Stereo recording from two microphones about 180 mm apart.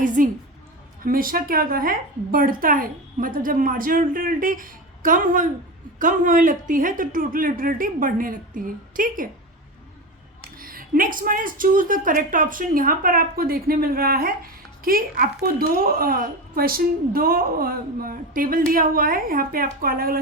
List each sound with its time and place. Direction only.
0.0 s a sound: 45° right (ahead or behind)
1.0 s a woman's voice: 50° right (ahead or behind)
10.6 s a woman's voice: 50° right (ahead or behind)